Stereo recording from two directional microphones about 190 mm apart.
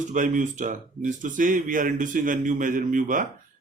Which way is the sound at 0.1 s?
40° right (ahead or behind).